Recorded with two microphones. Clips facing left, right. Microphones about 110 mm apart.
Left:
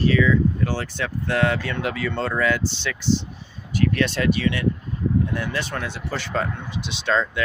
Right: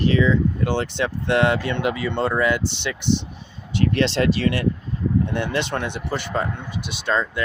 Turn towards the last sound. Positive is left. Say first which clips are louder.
# even
turn(degrees=-10)  # may be behind; listen again after turning